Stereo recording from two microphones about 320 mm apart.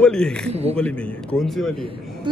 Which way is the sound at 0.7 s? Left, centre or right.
Centre.